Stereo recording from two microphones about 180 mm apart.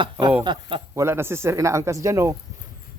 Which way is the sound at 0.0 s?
25° right (ahead or behind).